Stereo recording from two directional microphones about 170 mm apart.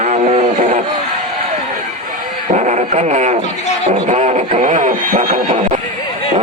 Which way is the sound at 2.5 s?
45° right (ahead or behind).